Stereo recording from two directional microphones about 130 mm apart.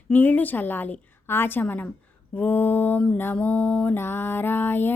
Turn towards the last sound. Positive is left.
turn(degrees=15)  # may be behind; listen again after turning